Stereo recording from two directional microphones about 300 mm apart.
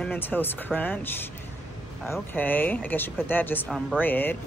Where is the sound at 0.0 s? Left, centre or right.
Centre.